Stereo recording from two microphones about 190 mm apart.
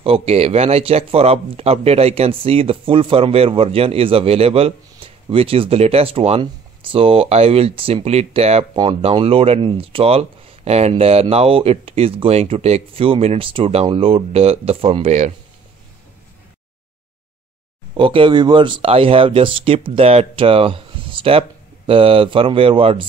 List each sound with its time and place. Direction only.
0.0 s speech: 30° right (ahead or behind)
17.9 s speech: 25° right (ahead or behind)